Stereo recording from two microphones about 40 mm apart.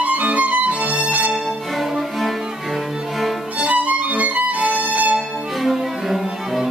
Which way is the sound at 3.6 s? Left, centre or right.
Right.